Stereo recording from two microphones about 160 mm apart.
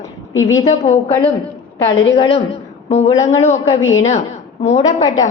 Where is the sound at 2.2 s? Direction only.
35° left (ahead or behind).